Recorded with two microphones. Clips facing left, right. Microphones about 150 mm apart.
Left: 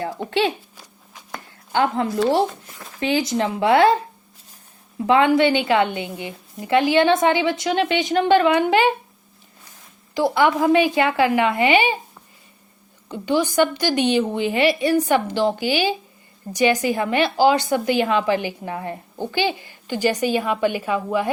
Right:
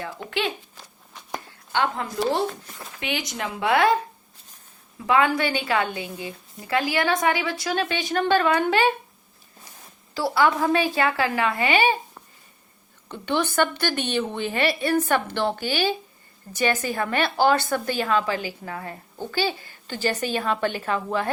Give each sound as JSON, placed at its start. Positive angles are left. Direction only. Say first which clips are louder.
{"t": 0.2, "sound": "a woman's voice", "louder": "left 6 dB", "side_deg": 30}
{"t": 1.7, "sound": "a woman's voice", "louder": "left 5 dB", "side_deg": 35}
{"t": 5.0, "sound": "a woman's voice", "louder": "left 5 dB", "side_deg": 25}
{"t": 10.2, "sound": "a woman's voice", "louder": "left 3 dB", "side_deg": 20}
{"t": 13.1, "sound": "a woman's voice", "louder": "left 4 dB", "side_deg": 10}